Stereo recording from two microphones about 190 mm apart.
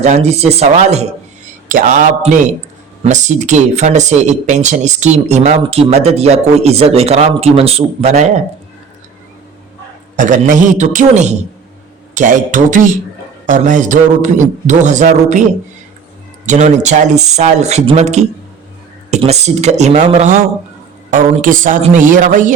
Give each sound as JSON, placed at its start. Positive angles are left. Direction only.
{"t": 0.0, "sound": "speech", "side_deg": -35}
{"t": 10.2, "sound": "speech", "side_deg": -40}
{"t": 16.5, "sound": "a man's voice", "side_deg": -40}